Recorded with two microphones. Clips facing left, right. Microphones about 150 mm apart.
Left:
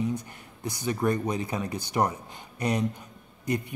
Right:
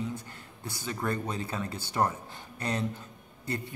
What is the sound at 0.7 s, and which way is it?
Speech, 15° left (ahead or behind).